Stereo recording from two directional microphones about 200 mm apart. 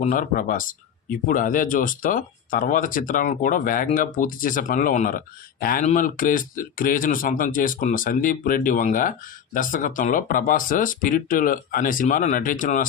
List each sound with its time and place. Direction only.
0.0 s speech: 40° left (ahead or behind)